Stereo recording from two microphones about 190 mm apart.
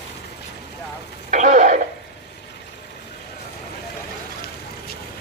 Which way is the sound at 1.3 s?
40° right (ahead or behind).